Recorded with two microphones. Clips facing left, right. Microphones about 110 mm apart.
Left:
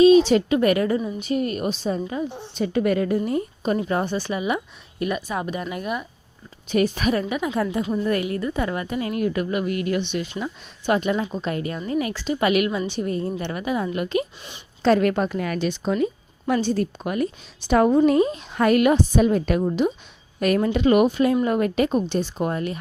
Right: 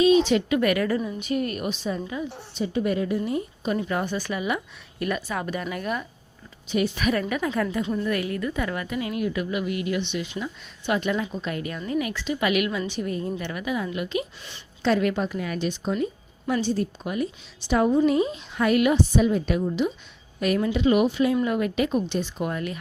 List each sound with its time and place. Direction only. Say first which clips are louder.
0.3 s a woman's voice: left 3 dB; 30° left (ahead or behind)
2.6 s a woman's voice: left 4 dB; 65° left (ahead or behind); by 6.1 s 15° left (ahead or behind)
6.7 s a woman's voice: left 3 dB; 45° left (ahead or behind)
7.1 s a woman's voice: left 2 dB; 25° left (ahead or behind); by 11.0 s 40° left (ahead or behind)
11.0 s a woman's voice: left 3 dB; 30° left (ahead or behind); by 16.0 s 90° left
16.5 s a woman's voice: left 3 dB; 55° left (ahead or behind); by 22.8 s 35° left (ahead or behind)